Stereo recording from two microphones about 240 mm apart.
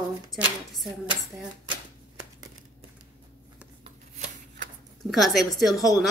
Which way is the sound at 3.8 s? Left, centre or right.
Right.